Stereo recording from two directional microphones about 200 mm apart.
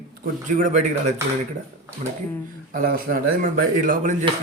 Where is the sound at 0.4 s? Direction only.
40° right (ahead or behind).